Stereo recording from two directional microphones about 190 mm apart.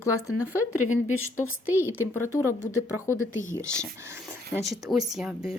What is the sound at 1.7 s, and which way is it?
Speech, 10° right (ahead or behind).